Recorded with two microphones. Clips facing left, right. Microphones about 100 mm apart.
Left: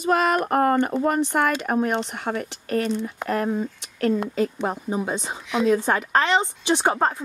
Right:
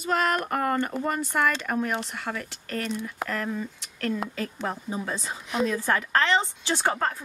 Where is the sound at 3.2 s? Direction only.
35° left (ahead or behind).